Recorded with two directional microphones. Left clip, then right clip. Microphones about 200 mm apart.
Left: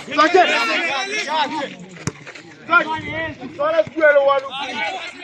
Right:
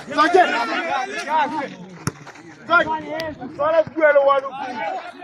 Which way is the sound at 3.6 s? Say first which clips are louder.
Left 1 dB; 45° left (ahead or behind).